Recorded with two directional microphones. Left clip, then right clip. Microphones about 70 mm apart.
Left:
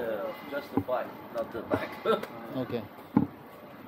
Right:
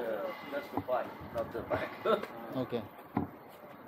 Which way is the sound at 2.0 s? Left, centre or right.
Left.